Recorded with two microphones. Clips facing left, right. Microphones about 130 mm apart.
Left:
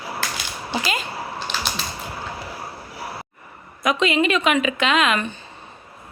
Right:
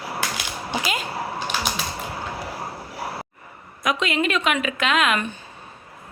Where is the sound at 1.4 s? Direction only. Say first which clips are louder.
Even; 10° right (ahead or behind).